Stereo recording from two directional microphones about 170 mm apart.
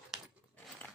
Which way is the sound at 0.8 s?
10° left (ahead or behind).